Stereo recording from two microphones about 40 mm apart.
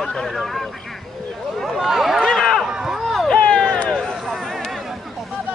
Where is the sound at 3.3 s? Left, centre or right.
Left.